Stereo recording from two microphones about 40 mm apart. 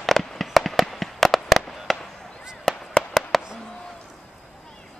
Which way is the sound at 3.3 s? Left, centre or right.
Centre.